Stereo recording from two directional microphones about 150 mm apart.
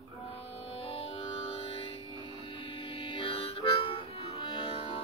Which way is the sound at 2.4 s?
35° left (ahead or behind).